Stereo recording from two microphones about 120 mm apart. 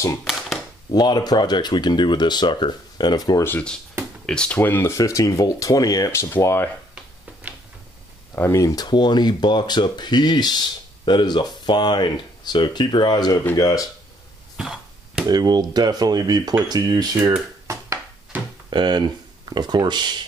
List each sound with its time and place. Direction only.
0.2 s a sound: centre (ahead or behind)
0.9 s speech: 35° left (ahead or behind)
3.4 s speech: 15° left (ahead or behind)
4.9 s speech: 25° left (ahead or behind)
8.4 s speech: 25° left (ahead or behind)
14.6 s chop: 5° right (ahead or behind)
15.2 s speech: 35° right (ahead or behind)
17.6 s a sound: 25° right (ahead or behind)
18.7 s speech: 40° right (ahead or behind)